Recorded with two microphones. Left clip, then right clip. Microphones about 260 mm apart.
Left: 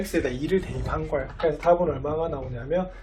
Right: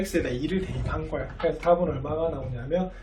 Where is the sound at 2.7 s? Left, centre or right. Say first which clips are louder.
Left 1 dB; centre.